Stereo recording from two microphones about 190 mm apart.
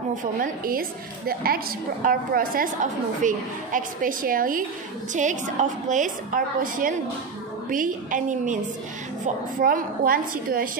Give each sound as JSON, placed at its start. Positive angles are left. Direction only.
{"t": 0.2, "sound": "a woman's voice", "side_deg": -45}
{"t": 9.6, "sound": "a woman's voice", "side_deg": -50}